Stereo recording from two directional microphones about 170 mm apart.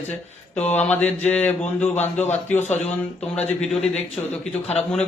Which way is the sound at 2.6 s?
40° left (ahead or behind).